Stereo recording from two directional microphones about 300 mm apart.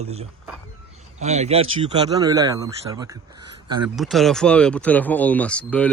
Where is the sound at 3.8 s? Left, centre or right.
Centre.